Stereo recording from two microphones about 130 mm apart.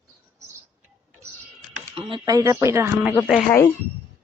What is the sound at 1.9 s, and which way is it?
Speech, 45° right (ahead or behind).